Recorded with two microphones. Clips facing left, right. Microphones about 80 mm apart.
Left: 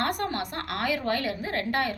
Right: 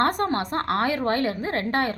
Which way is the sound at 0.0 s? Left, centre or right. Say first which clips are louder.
Right 6 dB; right.